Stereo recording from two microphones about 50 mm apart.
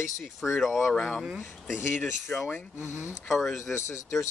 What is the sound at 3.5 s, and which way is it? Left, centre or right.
Speech, left.